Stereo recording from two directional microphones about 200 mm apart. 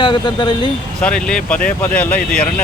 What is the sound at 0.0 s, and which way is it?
Speech, 25° left (ahead or behind).